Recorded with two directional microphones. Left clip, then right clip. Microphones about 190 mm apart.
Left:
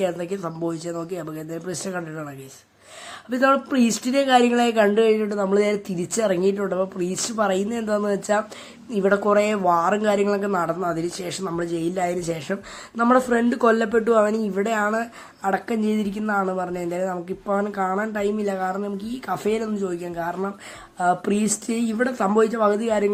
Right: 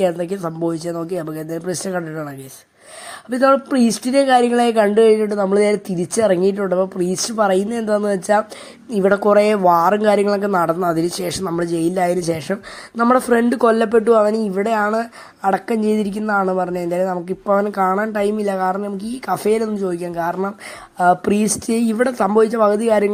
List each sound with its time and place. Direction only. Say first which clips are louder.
0.0 s speech: right 6 dB; 25° right (ahead or behind)